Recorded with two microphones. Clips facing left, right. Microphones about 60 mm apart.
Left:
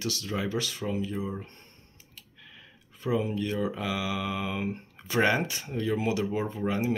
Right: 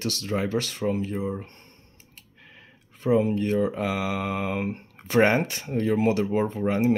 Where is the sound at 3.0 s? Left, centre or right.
Right.